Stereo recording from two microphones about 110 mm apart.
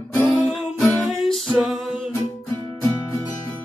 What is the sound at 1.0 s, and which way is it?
Music, 5° right (ahead or behind).